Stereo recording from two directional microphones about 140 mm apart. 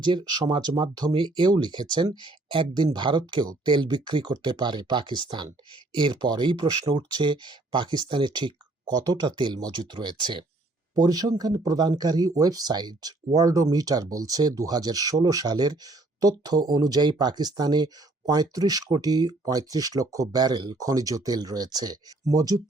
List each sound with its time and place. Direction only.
0.0 s speech: 30° right (ahead or behind)